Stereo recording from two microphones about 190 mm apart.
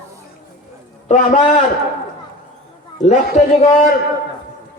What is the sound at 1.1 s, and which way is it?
Speech, 40° left (ahead or behind).